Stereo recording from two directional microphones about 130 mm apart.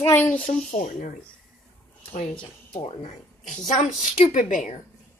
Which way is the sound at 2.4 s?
40° left (ahead or behind).